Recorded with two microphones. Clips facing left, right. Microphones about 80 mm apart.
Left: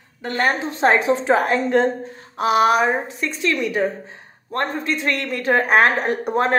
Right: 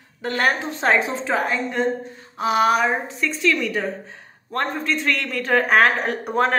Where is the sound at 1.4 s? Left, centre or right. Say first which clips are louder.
Left 6 dB; left.